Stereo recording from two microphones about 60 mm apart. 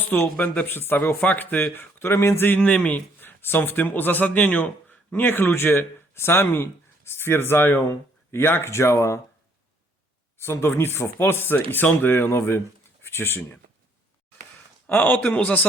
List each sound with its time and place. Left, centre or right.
0.0 s speech: left
2.6 s speech: left
10.3 s speech: left
14.9 s a man's voice: left